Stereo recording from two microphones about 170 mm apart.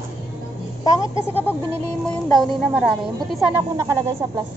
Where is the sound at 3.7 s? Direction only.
15° right (ahead or behind).